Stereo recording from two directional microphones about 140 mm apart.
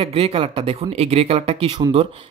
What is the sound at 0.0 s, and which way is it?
Speech, 45° right (ahead or behind).